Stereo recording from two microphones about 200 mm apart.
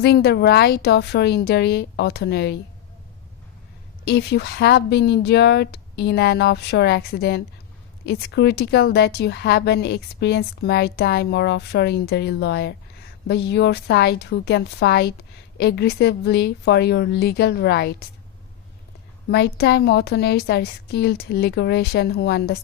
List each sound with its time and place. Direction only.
0.0 s speech: 55° left (ahead or behind)
4.0 s speech: 55° left (ahead or behind)
19.3 s speech: 55° left (ahead or behind)